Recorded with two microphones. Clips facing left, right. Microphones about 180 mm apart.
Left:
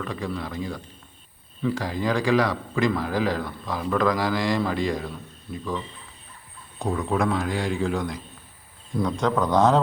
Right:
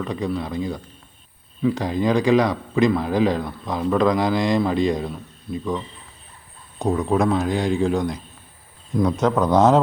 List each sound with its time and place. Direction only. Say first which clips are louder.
0.0 s speech: right 5 dB; 20° right (ahead or behind)
6.7 s speech: right 5 dB; 20° right (ahead or behind)